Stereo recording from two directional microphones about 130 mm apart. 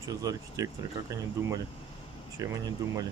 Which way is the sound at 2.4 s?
25° right (ahead or behind).